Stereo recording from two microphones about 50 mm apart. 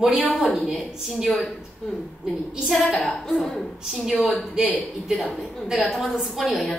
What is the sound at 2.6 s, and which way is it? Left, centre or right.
A woman's voice, centre.